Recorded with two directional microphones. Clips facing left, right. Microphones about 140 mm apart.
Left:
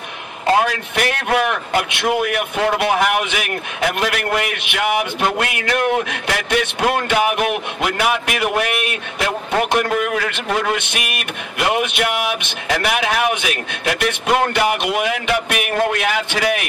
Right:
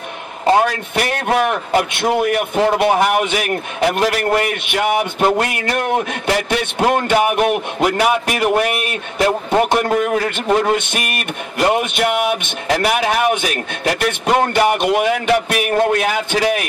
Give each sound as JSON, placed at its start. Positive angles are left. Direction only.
{"t": 0.7, "sound": "a man's voice", "side_deg": -40}